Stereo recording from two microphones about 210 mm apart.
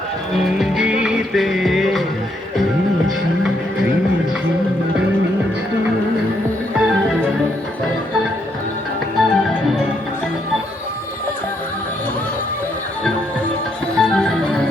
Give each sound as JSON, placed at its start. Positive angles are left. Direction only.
{"t": 0.4, "sound": "music", "side_deg": 0}
{"t": 6.7, "sound": "music", "side_deg": -5}
{"t": 9.1, "sound": "music", "side_deg": 0}
{"t": 13.9, "sound": "music", "side_deg": 5}